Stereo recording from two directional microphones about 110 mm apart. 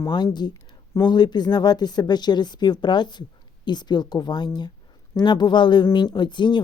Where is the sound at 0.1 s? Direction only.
40° left (ahead or behind).